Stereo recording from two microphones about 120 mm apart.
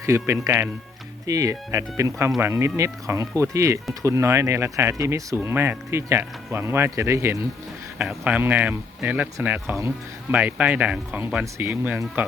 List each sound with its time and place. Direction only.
0.0 s speech: 25° right (ahead or behind)
7.9 s speech: 10° right (ahead or behind)